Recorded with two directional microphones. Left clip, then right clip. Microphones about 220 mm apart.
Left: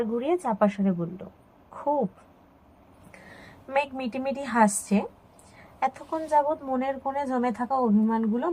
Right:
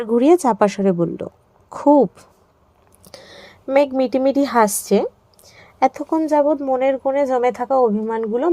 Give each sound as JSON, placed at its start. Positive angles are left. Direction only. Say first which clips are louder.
{"t": 0.0, "sound": "a woman's voice", "louder": "right 12 dB", "side_deg": -50}
{"t": 3.4, "sound": "a woman's voice", "louder": "right 11 dB", "side_deg": -45}